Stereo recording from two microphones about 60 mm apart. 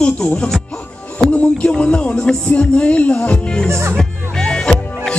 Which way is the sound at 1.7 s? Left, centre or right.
Centre.